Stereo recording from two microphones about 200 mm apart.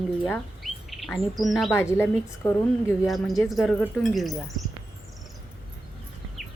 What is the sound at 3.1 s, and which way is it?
Speech, centre (ahead or behind).